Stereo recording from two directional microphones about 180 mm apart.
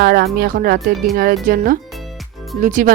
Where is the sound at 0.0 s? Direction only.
55° right (ahead or behind).